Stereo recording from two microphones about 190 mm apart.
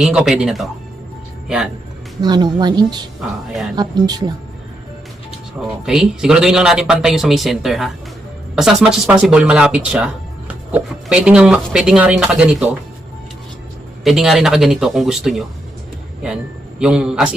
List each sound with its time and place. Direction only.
0.0 s speech: centre (ahead or behind)
2.2 s speech: 20° right (ahead or behind)
3.2 s speech: centre (ahead or behind)
3.8 s speech: 20° right (ahead or behind)
5.8 s speech: centre (ahead or behind)
14.0 s speech: centre (ahead or behind)
16.8 s speech: 5° right (ahead or behind)